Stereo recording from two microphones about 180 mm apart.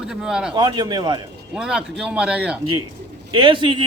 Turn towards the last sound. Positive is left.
turn(degrees=-30)  # may be behind; listen again after turning